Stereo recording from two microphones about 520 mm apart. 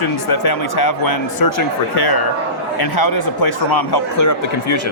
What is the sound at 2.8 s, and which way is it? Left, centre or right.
Speech, left.